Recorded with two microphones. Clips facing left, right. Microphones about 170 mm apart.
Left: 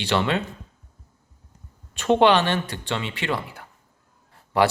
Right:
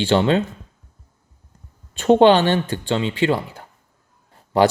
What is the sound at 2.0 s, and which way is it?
Speech, 40° right (ahead or behind).